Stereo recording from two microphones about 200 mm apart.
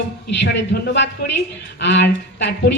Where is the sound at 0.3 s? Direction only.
60° left (ahead or behind).